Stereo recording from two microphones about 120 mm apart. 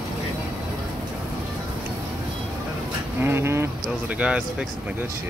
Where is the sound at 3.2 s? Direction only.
20° right (ahead or behind).